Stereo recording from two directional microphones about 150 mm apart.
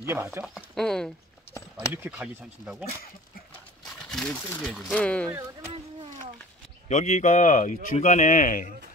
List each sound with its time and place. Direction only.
0.0 s speech: 15° right (ahead or behind)
0.6 s speech: 5° left (ahead or behind)
4.1 s speech: 5° left (ahead or behind)
6.9 s speech: 50° left (ahead or behind)